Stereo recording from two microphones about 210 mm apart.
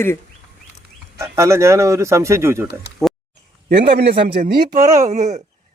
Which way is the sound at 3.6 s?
50° right (ahead or behind).